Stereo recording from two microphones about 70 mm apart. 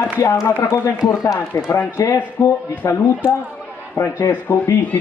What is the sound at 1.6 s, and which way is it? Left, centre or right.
Speech, left.